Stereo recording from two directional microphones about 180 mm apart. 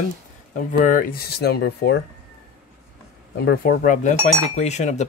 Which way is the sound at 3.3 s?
60° left (ahead or behind).